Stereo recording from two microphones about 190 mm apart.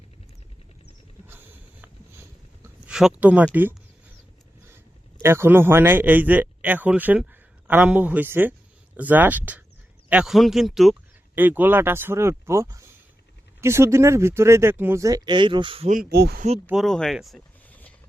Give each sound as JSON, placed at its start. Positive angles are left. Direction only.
{"t": 2.8, "sound": "speech", "side_deg": -5}
{"t": 5.2, "sound": "speech", "side_deg": -10}
{"t": 15.9, "sound": "speech", "side_deg": -50}
{"t": 16.6, "sound": "speech", "side_deg": 0}